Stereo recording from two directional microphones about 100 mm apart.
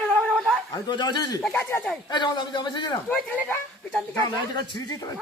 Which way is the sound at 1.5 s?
25° left (ahead or behind).